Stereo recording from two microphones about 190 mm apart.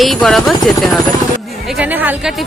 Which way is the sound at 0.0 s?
Centre (ahead or behind).